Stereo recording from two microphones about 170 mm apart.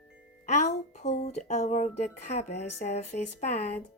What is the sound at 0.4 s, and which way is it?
A woman's voice, 45° left (ahead or behind).